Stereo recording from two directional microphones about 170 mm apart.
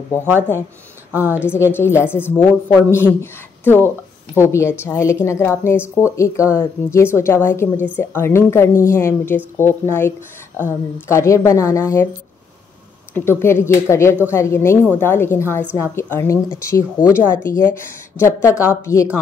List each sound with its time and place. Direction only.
1.1 s a woman's voice: 10° right (ahead or behind)
1.5 s a woman's voice: 15° left (ahead or behind)
13.1 s a woman's voice: 15° left (ahead or behind)